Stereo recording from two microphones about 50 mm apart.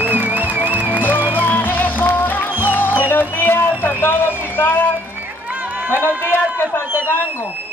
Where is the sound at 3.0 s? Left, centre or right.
Left.